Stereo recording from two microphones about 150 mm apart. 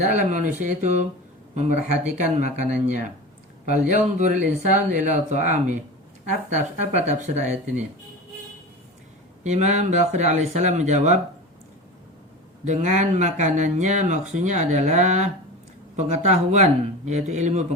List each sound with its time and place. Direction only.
0.0 s speech: 55° right (ahead or behind)
6.9 s speech: 50° right (ahead or behind)
9.4 s speech: 50° right (ahead or behind)
12.6 s speech: 55° right (ahead or behind)